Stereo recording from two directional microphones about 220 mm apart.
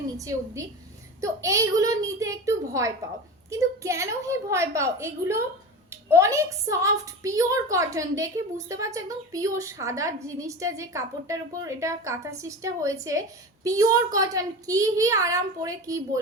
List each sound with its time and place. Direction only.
0.2 s a woman's voice: 15° right (ahead or behind)